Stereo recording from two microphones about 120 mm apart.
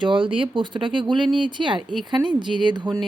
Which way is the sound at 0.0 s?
45° right (ahead or behind).